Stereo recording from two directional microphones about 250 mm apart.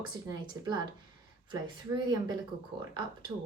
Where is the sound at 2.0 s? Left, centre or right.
Centre.